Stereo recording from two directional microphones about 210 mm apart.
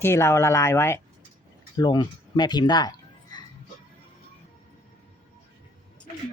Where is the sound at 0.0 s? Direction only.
10° left (ahead or behind).